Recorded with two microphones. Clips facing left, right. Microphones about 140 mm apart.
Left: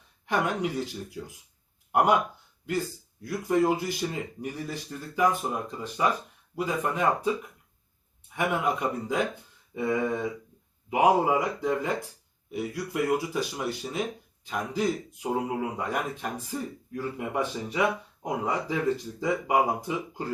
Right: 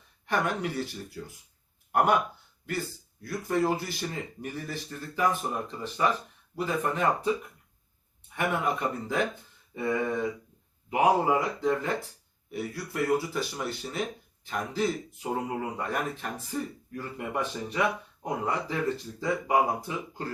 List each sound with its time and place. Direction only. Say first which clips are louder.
0.3 s speech: left 2 dB; 15° left (ahead or behind)
3.2 s speech: left 3 dB; 15° left (ahead or behind)
8.4 s speech: left 1 dB; 15° left (ahead or behind)
10.8 s speech: left 1 dB; 10° left (ahead or behind)